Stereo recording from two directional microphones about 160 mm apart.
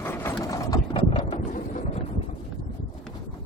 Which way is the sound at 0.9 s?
35° left (ahead or behind).